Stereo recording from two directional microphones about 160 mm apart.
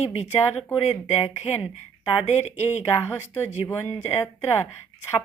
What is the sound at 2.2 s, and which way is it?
Speech, 45° left (ahead or behind).